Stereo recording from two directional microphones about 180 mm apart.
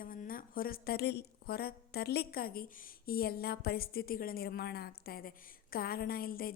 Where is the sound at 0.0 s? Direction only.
50° left (ahead or behind).